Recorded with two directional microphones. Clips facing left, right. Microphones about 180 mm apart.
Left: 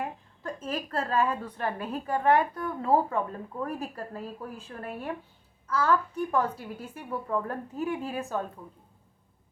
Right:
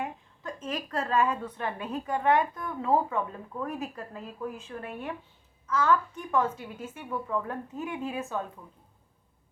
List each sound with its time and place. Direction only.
0.0 s a woman's voice: 30° left (ahead or behind)